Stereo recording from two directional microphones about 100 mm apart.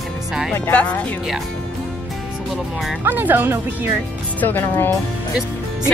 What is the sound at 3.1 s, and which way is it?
Speech, 20° right (ahead or behind).